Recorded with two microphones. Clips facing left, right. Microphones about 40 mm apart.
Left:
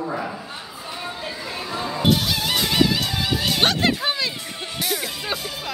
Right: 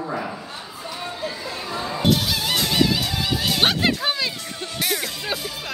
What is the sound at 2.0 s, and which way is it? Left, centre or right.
Music, centre.